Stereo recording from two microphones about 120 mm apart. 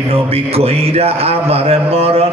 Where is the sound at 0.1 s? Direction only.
55° right (ahead or behind).